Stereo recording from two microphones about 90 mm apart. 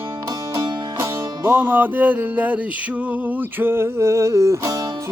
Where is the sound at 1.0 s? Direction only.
25° right (ahead or behind).